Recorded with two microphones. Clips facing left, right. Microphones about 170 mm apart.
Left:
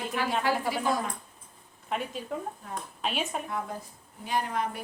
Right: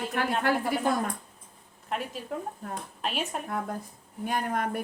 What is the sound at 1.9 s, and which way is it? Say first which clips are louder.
Speech: even; centre (ahead or behind).